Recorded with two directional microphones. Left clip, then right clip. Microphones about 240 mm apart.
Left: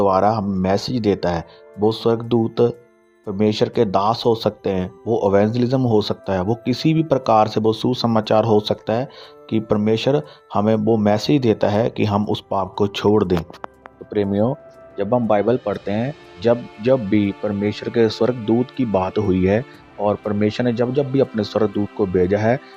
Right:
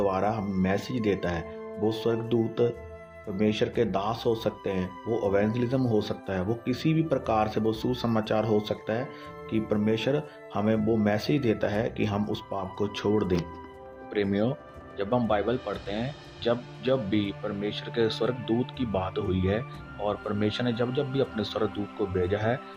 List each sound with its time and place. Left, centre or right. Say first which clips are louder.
0.0 s speech: left 11 dB; left
14.1 s speech: left 8 dB; left